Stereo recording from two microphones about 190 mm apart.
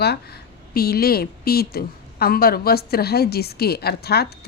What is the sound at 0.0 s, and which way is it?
A woman's voice, 60° left (ahead or behind).